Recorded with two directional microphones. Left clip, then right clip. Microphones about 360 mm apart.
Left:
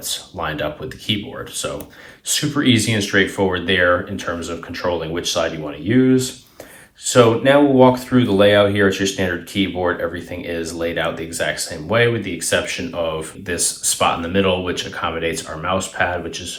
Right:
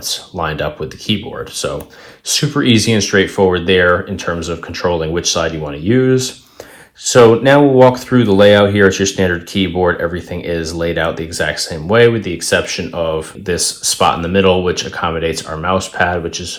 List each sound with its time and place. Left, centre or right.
0.1 s speech: centre